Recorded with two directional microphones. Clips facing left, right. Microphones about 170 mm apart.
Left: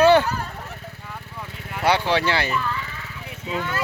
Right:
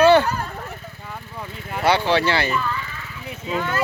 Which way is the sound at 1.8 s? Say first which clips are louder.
Right 2 dB; 15° left (ahead or behind).